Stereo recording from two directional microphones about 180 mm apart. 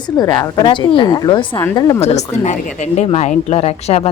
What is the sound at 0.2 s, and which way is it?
A woman's voice, 20° left (ahead or behind).